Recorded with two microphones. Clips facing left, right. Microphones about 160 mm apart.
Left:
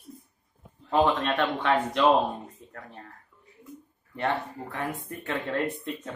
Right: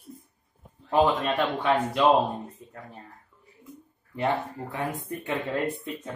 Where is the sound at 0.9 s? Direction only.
5° right (ahead or behind).